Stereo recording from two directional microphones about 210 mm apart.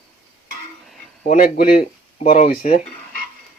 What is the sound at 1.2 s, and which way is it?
Speech, 40° left (ahead or behind).